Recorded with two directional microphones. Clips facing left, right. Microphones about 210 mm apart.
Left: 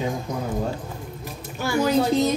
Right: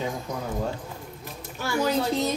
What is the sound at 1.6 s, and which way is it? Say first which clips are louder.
Speech: left 4 dB; 15° left (ahead or behind).